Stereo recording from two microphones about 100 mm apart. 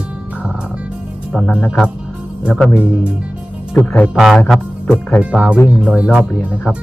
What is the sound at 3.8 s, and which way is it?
Music, 15° left (ahead or behind).